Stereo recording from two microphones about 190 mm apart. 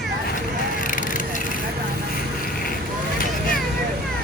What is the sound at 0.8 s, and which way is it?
Vehicle, 45° left (ahead or behind).